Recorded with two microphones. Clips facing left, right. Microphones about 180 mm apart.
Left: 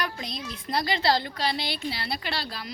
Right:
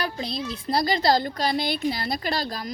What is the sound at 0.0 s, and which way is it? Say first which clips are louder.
A child's voice: right 4 dB; 30° right (ahead or behind).